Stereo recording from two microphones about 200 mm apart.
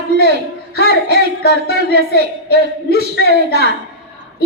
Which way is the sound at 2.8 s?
55° left (ahead or behind).